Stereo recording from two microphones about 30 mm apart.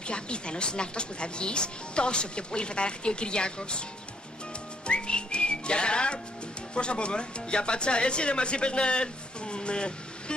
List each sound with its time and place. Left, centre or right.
0.1 s speech: left
4.8 s whistling: left
6.7 s speech: left